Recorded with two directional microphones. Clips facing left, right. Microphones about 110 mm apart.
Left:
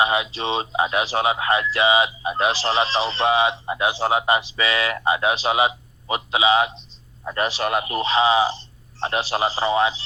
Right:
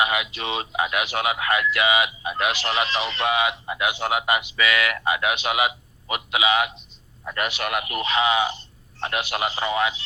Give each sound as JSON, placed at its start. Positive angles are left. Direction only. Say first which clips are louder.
{"t": 0.0, "sound": "speech", "louder": "left 3 dB", "side_deg": 30}